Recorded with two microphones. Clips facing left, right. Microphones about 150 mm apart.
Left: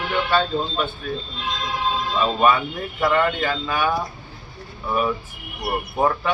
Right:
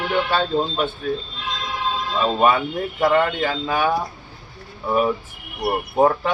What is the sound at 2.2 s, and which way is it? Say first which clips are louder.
Speech: right 1 dB; 25° right (ahead or behind).